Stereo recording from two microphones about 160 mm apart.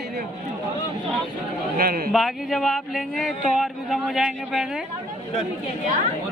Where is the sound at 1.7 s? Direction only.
70° right (ahead or behind).